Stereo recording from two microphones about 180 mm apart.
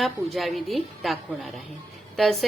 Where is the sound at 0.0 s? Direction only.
Centre (ahead or behind).